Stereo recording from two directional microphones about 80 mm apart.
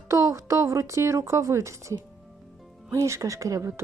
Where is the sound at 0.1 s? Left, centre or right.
Right.